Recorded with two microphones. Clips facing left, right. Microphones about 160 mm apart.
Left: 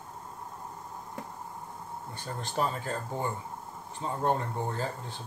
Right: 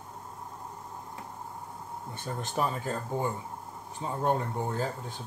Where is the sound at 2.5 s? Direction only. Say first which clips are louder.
Even; 5° right (ahead or behind).